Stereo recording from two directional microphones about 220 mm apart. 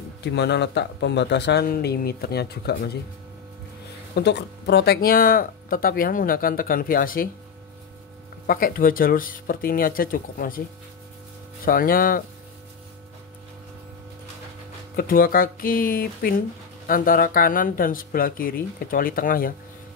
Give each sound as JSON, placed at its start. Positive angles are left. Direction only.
{"t": 0.2, "sound": "speech", "side_deg": 50}
{"t": 4.1, "sound": "speech", "side_deg": 50}
{"t": 8.5, "sound": "speech", "side_deg": 40}
{"t": 11.6, "sound": "speech", "side_deg": 40}
{"t": 15.0, "sound": "speech", "side_deg": 40}